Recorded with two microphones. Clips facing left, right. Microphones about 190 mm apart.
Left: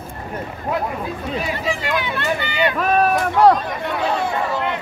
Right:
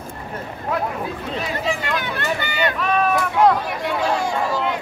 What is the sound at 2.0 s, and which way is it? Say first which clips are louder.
Speech: left 2 dB; 45° right (ahead or behind).